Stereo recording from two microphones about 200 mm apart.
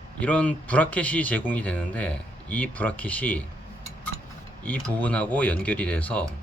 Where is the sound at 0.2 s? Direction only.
5° left (ahead or behind).